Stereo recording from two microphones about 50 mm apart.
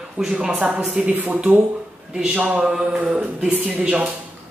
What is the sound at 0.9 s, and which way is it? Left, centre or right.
Speech, right.